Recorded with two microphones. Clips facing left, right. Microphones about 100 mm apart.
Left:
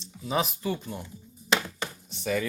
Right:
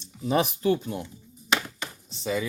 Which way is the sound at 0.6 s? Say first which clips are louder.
Right 7 dB; 65° right (ahead or behind).